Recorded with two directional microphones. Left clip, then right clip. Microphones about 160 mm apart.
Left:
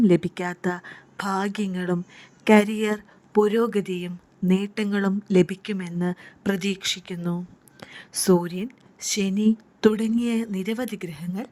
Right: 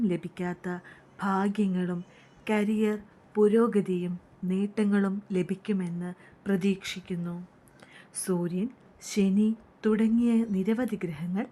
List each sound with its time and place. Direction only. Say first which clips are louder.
0.0 s a woman's voice: left 10 dB; 35° left (ahead or behind)